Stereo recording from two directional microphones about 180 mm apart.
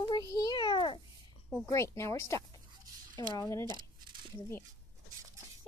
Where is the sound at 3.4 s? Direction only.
15° left (ahead or behind).